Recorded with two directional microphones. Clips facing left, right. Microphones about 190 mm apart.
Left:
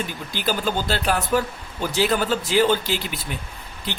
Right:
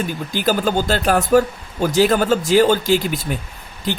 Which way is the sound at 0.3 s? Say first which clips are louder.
Right 6 dB; 50° right (ahead or behind).